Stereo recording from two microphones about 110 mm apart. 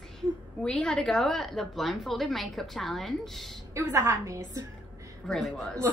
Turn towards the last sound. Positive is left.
turn(degrees=5)  # may be behind; listen again after turning